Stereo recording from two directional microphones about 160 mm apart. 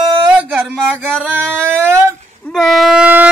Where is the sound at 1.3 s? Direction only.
10° right (ahead or behind).